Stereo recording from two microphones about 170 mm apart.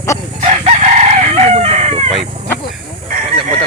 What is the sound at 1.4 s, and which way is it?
Chicken, 40° right (ahead or behind).